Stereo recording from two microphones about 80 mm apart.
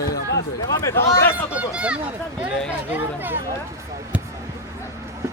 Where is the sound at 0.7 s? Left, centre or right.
Left.